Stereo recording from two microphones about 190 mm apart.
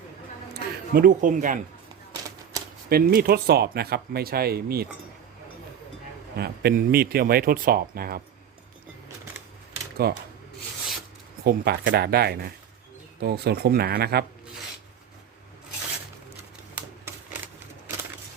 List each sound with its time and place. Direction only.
0.5 s speech: 50° right (ahead or behind)
2.9 s speech: 50° right (ahead or behind)
6.3 s speech: 55° right (ahead or behind)
10.0 s speech: 55° right (ahead or behind)
11.4 s speech: 55° right (ahead or behind)
16.7 s typewriter: 10° right (ahead or behind)